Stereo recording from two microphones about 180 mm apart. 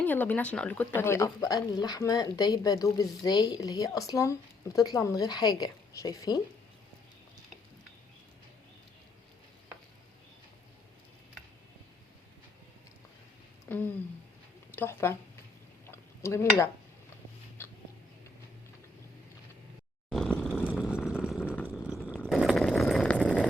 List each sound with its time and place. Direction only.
0.0 s speech: 10° left (ahead or behind)
13.7 s a sound: 10° left (ahead or behind)
14.8 s speech: 15° left (ahead or behind)
15.9 s cutlery: 15° left (ahead or behind)
20.1 s vehicle: 5° left (ahead or behind)
21.4 s vehicle: 10° left (ahead or behind)
22.1 s a sound: centre (ahead or behind)